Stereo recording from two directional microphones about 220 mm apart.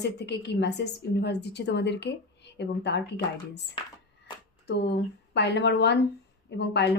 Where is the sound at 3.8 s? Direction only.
20° left (ahead or behind).